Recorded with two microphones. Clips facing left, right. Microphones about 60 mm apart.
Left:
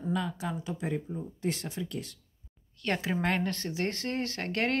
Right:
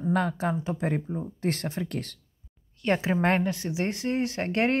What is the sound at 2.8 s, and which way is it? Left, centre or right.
Speech, right.